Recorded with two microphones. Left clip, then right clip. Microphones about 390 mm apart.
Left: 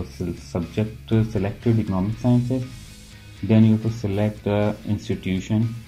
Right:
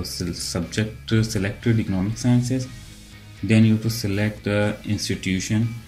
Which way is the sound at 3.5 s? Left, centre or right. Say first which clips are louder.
Even; centre.